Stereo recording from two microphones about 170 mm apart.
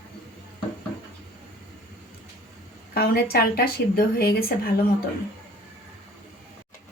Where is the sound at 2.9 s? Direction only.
65° left (ahead or behind).